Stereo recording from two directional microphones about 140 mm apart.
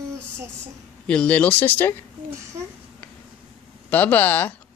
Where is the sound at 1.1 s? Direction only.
10° left (ahead or behind).